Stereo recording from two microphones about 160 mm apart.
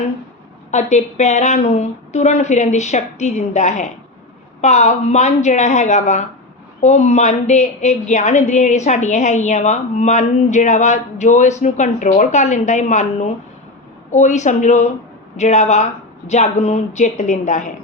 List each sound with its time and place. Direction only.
0.7 s a woman's voice: 45° left (ahead or behind)